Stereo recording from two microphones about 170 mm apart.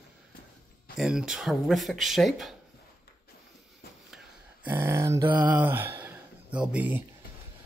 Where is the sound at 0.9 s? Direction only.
5° right (ahead or behind).